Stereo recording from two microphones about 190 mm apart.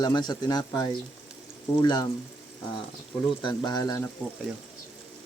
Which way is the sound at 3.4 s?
25° left (ahead or behind).